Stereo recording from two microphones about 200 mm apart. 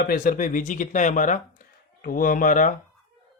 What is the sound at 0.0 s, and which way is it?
Speech, 45° left (ahead or behind).